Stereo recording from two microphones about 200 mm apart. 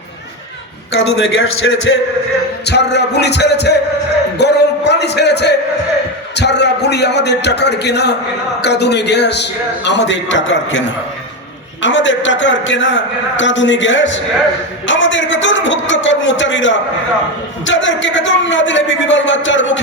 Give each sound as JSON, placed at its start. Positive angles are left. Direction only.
{"t": 0.9, "sound": "a man's voice", "side_deg": 75}
{"t": 2.6, "sound": "a man's voice", "side_deg": 55}